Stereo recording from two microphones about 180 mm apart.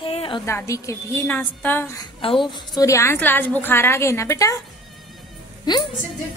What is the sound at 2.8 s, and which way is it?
A woman's voice, 15° left (ahead or behind).